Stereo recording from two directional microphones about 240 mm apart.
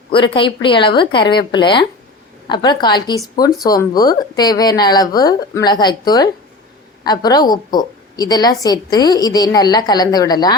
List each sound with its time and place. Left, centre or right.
0.1 s a woman's voice: left